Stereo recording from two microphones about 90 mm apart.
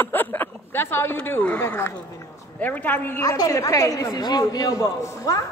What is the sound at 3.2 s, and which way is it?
A man's voice, 40° left (ahead or behind).